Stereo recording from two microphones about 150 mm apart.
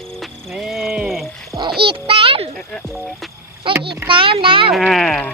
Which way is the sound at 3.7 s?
35° right (ahead or behind).